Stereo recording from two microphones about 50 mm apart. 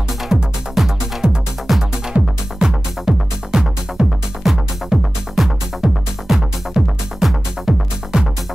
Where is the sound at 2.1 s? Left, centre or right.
Right.